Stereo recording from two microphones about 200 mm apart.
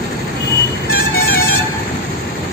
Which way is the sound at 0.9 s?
50° left (ahead or behind).